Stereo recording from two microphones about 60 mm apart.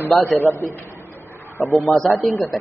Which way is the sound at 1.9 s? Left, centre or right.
Centre.